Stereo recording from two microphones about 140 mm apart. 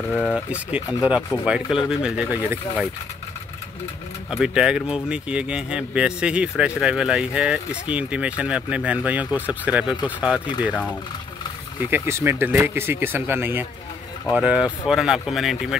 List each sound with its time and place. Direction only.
0.1 s speech: 10° left (ahead or behind)
0.5 s speech: 10° right (ahead or behind)
4.3 s speech: 5° right (ahead or behind)
11.9 s speech: 15° right (ahead or behind)